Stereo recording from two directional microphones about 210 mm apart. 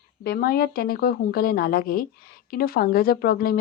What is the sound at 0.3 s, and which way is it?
A woman's voice, 45° left (ahead or behind).